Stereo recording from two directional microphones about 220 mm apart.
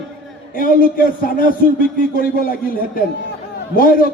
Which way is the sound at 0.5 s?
40° left (ahead or behind).